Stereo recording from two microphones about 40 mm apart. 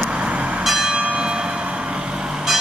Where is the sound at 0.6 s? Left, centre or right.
Centre.